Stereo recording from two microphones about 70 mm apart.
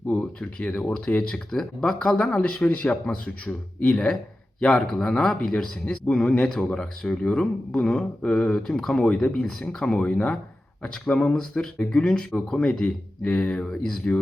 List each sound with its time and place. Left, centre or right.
0.2 s speech: centre